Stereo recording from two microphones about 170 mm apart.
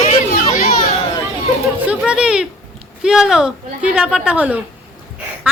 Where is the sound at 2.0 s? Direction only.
5° right (ahead or behind).